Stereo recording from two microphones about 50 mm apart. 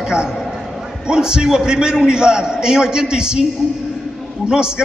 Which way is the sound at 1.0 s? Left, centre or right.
Centre.